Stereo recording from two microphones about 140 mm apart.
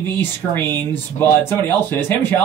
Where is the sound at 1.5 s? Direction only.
15° left (ahead or behind).